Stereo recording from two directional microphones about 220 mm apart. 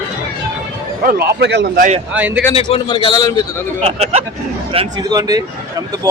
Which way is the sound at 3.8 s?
25° right (ahead or behind).